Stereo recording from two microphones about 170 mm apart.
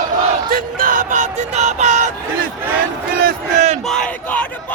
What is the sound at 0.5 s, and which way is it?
Music, 55° right (ahead or behind).